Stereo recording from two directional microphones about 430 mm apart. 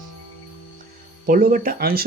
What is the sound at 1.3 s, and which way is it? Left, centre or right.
Speech, centre.